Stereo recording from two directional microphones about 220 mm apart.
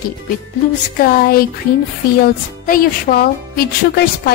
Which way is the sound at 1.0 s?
40° left (ahead or behind).